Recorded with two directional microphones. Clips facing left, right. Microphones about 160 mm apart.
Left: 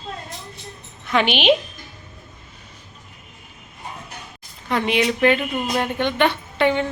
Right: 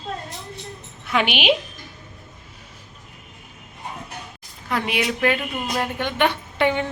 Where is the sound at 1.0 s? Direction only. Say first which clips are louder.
Left 3 dB; 5° right (ahead or behind).